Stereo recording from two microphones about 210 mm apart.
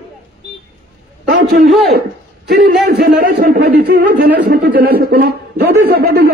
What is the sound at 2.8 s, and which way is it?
Speech, 50° right (ahead or behind).